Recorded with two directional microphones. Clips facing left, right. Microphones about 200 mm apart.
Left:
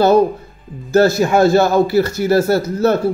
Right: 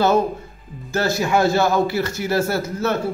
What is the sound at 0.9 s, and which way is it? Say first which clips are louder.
A man's voice: left 7 dB; 40° left (ahead or behind).